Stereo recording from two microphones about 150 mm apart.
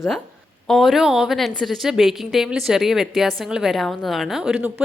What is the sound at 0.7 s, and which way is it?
A woman's voice, centre (ahead or behind).